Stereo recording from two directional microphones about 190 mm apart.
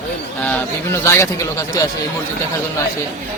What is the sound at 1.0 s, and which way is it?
Speech, 15° left (ahead or behind).